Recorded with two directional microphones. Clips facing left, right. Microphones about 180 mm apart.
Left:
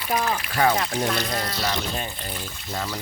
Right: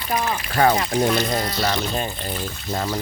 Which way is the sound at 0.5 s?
45° right (ahead or behind).